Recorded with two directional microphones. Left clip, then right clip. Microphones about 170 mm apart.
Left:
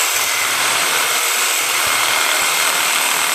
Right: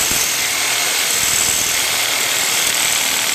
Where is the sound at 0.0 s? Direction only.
Centre (ahead or behind).